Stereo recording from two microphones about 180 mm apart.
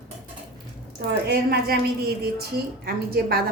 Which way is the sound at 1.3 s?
60° right (ahead or behind).